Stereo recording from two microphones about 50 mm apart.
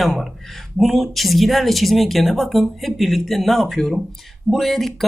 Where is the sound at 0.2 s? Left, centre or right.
Centre.